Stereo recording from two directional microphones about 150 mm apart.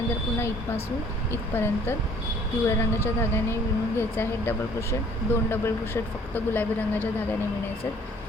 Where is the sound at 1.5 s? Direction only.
15° left (ahead or behind).